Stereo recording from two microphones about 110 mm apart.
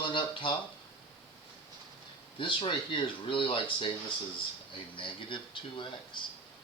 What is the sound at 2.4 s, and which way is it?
Speech, 50° left (ahead or behind).